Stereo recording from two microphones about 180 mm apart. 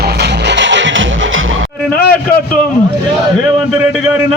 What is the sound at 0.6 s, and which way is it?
Music, 90° right.